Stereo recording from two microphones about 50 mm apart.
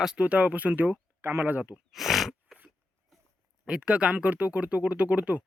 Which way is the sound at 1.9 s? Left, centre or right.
Centre.